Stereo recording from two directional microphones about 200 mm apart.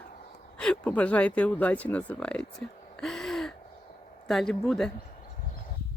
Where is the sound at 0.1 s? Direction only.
40° left (ahead or behind).